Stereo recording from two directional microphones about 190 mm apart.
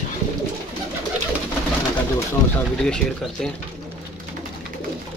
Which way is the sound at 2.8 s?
5° left (ahead or behind).